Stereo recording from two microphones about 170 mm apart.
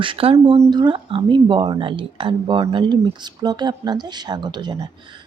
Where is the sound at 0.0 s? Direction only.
30° right (ahead or behind).